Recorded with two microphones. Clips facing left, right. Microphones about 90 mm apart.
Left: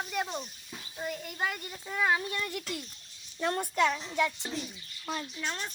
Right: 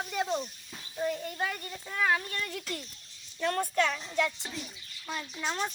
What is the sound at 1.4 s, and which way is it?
Speech, 10° left (ahead or behind).